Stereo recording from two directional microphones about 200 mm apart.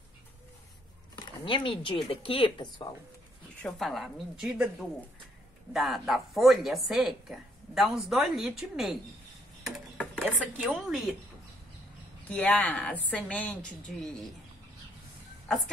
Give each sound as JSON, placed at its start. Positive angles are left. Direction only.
{"t": 1.1, "sound": "a sound", "side_deg": 25}
{"t": 2.0, "sound": "speech", "side_deg": 25}
{"t": 3.6, "sound": "a woman's voice", "side_deg": 0}
{"t": 9.9, "sound": "speech", "side_deg": 5}
{"t": 12.3, "sound": "a woman's voice", "side_deg": 5}